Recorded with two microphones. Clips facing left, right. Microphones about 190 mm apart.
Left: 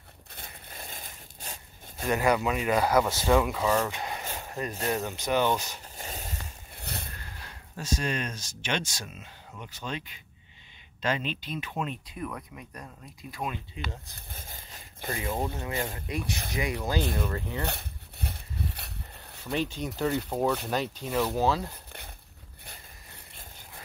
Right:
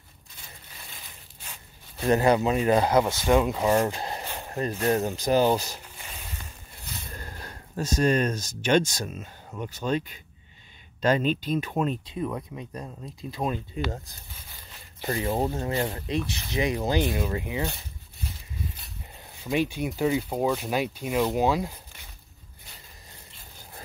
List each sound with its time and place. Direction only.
0.3 s a sound: 55° left (ahead or behind)
2.0 s speech: 30° right (ahead or behind)
2.8 s speech: 20° right (ahead or behind)
3.6 s speech: 40° right (ahead or behind)
5.9 s a sound: 40° left (ahead or behind)
6.8 s vehicle: 65° left (ahead or behind)
7.2 s speech: 45° right (ahead or behind)
12.1 s speech: 25° right (ahead or behind)
14.3 s a sound: 45° left (ahead or behind)
15.1 s speech: 30° right (ahead or behind)
16.5 s speech: 25° right (ahead or behind)
17.6 s a sound: 65° left (ahead or behind)
19.4 s speech: 10° right (ahead or behind)